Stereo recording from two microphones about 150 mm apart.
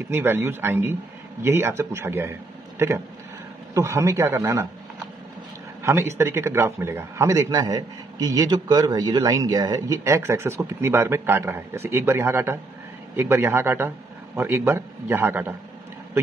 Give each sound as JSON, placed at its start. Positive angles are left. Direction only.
{"t": 0.1, "sound": "a man's voice", "side_deg": -15}
{"t": 5.8, "sound": "a man's voice", "side_deg": -15}